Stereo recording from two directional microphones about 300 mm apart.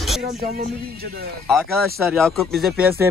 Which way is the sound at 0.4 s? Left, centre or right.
Right.